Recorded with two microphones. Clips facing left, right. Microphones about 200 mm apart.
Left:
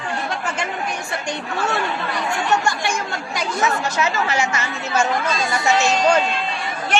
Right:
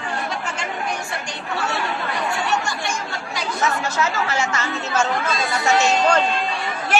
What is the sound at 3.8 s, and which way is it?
A woman's voice, 15° left (ahead or behind).